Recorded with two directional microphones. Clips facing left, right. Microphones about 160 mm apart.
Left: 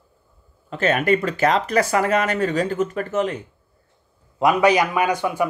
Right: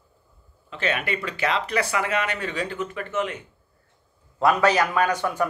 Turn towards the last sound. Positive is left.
turn(degrees=10)  # may be behind; listen again after turning